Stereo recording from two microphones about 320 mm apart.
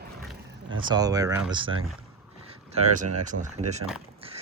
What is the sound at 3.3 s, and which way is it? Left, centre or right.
Speech, right.